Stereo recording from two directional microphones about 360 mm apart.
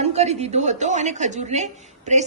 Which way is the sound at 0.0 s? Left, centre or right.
Centre.